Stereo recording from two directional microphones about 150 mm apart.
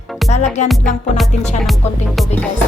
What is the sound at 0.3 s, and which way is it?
Music, 50° left (ahead or behind).